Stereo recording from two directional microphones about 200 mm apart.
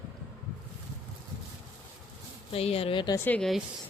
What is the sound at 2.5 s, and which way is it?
Speech, 30° left (ahead or behind).